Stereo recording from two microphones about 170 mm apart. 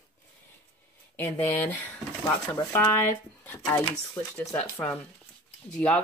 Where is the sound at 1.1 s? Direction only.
15° left (ahead or behind).